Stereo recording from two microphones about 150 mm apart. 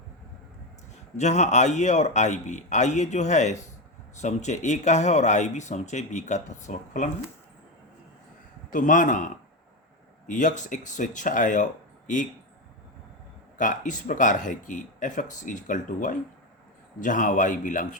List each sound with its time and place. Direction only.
1.1 s speech: 50° left (ahead or behind)
8.7 s speech: 60° left (ahead or behind)
13.6 s speech: 60° left (ahead or behind)